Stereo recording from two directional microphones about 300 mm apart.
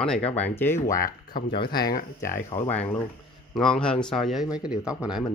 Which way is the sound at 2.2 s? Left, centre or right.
Centre.